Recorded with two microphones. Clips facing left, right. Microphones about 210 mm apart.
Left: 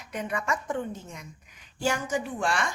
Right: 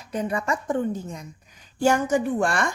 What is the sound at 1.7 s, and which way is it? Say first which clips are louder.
Speech: right 8 dB; 50° right (ahead or behind).